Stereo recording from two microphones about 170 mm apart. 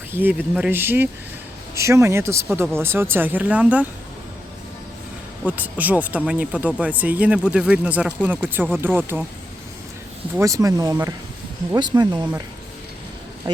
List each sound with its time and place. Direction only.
0.1 s speech: 10° right (ahead or behind)
5.5 s speech: 10° right (ahead or behind)
10.3 s speech: 20° right (ahead or behind)